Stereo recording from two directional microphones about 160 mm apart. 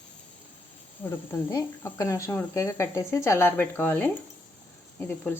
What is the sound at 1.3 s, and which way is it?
Speech, 20° left (ahead or behind).